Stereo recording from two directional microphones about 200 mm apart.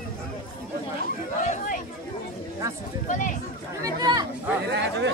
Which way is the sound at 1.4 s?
35° left (ahead or behind).